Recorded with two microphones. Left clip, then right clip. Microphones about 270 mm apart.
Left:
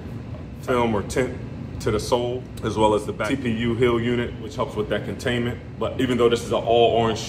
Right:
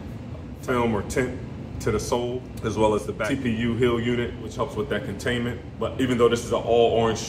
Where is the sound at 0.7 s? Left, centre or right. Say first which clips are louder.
Left 2 dB; centre.